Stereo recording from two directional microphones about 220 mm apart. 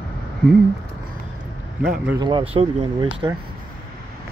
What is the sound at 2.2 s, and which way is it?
Speech, 20° right (ahead or behind).